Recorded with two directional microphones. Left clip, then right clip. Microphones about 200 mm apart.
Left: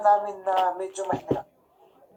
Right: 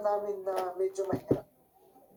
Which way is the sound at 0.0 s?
35° right (ahead or behind).